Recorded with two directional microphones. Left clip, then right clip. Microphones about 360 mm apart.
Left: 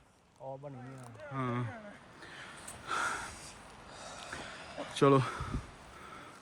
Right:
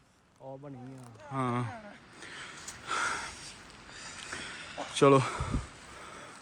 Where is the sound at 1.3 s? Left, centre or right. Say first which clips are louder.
Right 5 dB; centre.